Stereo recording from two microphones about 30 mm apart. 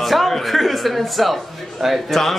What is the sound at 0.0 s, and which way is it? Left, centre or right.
A man's voice, centre.